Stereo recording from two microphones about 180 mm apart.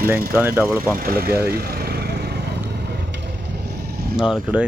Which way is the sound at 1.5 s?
60° right (ahead or behind).